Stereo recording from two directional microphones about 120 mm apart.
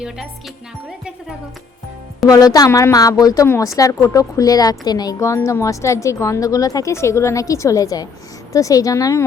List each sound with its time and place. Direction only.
2.2 s a woman's voice: 30° left (ahead or behind)
3.4 s speech: 20° left (ahead or behind)